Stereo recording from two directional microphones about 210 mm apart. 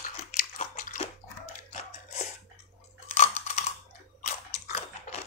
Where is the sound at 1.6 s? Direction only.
35° left (ahead or behind).